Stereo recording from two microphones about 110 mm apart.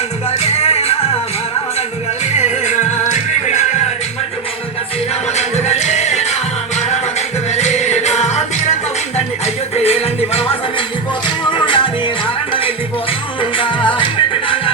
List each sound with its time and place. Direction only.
0.3 s music: 70° left (ahead or behind)
2.3 s music: 90° left
5.4 s music: 90° left
9.7 s music: 70° left (ahead or behind)
11.5 s music: 50° left (ahead or behind)
13.6 s music: 50° left (ahead or behind)